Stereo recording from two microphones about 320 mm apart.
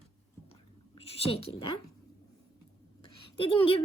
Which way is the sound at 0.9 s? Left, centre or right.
Centre.